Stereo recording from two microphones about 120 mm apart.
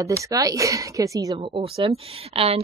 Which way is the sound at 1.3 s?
50° right (ahead or behind).